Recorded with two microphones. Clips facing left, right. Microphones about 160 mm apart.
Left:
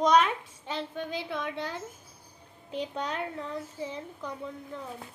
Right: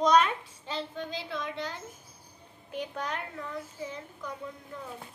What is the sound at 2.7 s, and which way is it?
A child's voice, 25° left (ahead or behind).